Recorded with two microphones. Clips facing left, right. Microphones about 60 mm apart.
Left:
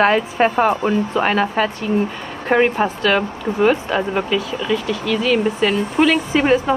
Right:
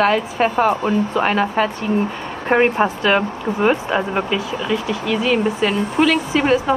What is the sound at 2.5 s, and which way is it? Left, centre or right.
A woman's voice, centre.